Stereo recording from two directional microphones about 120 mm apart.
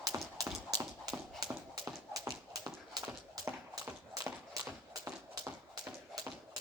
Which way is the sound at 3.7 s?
30° right (ahead or behind).